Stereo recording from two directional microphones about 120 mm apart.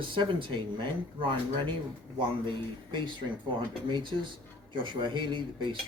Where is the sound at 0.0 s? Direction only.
45° right (ahead or behind).